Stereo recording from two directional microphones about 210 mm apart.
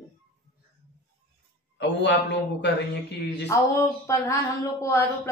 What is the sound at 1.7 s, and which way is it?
A man's voice, 55° left (ahead or behind).